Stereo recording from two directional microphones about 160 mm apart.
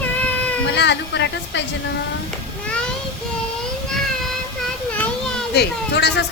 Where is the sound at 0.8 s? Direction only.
90° left.